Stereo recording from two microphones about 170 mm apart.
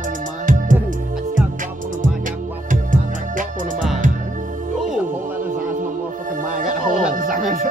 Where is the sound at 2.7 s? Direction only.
50° right (ahead or behind).